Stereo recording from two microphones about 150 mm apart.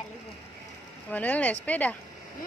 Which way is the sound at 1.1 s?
10° left (ahead or behind).